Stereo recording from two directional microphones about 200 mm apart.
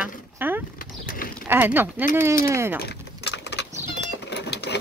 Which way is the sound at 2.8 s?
60° left (ahead or behind).